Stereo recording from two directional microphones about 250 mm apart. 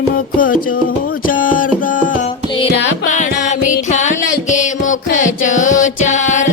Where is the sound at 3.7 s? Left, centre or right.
Left.